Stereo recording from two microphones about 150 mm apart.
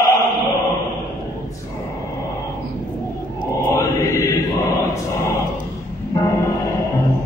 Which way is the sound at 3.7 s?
20° left (ahead or behind).